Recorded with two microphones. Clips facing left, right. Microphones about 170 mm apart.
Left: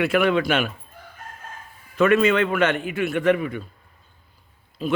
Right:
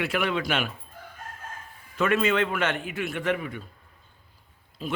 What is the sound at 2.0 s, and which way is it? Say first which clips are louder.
A man's voice: left 6 dB; 70° left (ahead or behind).